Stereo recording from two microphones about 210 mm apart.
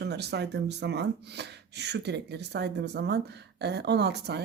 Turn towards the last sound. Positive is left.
turn(degrees=-55)  # may be behind; listen again after turning